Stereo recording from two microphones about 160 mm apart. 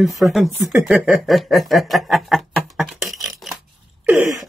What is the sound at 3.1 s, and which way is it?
Dishes, centre (ahead or behind).